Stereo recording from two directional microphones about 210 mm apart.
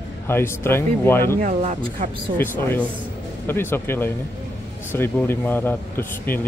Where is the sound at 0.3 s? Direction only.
10° left (ahead or behind).